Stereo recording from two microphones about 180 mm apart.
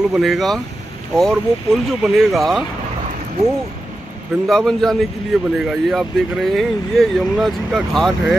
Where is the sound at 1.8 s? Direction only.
Centre (ahead or behind).